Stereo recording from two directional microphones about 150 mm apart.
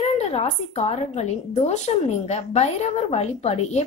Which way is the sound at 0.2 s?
45° left (ahead or behind).